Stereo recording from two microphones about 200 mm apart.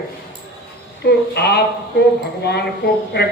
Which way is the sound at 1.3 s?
55° left (ahead or behind).